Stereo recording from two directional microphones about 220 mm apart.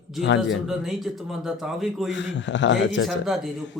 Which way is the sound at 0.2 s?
55° left (ahead or behind).